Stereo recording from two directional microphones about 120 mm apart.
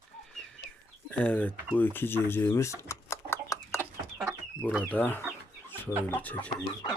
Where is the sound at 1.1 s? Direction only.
10° left (ahead or behind).